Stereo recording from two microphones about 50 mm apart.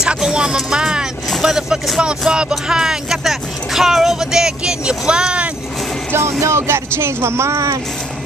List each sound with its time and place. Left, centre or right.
0.0 s music: centre
0.6 s vehicle: centre
1.4 s speech: centre
6.4 s speech: right